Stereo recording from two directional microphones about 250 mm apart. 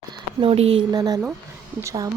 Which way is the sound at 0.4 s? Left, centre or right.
Right.